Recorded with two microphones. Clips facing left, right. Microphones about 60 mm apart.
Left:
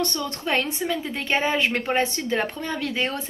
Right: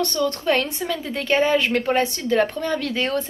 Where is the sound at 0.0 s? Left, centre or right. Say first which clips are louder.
Right 5 dB; left.